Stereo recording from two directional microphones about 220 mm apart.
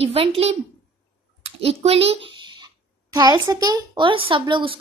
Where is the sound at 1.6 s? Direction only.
25° right (ahead or behind).